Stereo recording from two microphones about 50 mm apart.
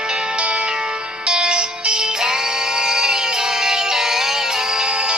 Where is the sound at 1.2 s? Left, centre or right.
Centre.